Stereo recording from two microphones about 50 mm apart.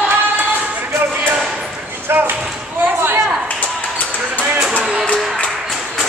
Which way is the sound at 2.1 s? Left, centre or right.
Right.